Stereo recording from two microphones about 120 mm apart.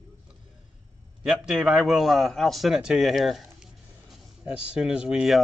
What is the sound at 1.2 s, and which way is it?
A man's voice, centre (ahead or behind).